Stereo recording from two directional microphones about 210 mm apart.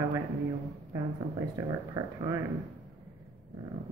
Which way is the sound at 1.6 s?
10° right (ahead or behind).